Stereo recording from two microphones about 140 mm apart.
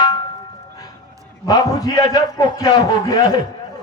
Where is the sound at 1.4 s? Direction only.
30° left (ahead or behind).